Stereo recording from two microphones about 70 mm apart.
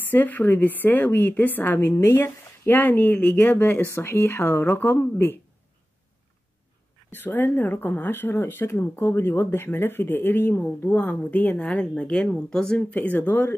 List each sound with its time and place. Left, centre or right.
0.0 s a woman's voice: left
7.1 s a woman's voice: left; by 12.8 s centre
12.9 s a woman's voice: left